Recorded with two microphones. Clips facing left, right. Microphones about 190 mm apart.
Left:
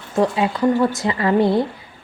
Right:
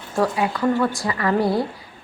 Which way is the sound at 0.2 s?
20° left (ahead or behind).